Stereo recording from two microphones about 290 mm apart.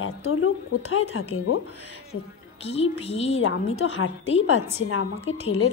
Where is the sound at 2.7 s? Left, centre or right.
Left.